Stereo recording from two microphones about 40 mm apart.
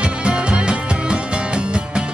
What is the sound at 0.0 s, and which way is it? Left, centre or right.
Music, right.